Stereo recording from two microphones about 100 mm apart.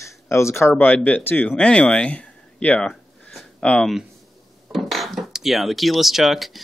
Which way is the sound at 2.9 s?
5° left (ahead or behind).